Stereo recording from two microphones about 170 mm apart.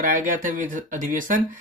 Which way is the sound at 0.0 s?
50° right (ahead or behind).